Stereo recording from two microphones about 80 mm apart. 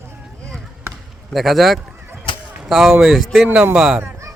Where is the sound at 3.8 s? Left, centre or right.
Centre.